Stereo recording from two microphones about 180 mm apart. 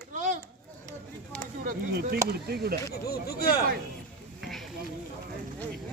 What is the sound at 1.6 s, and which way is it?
Speech, 55° right (ahead or behind).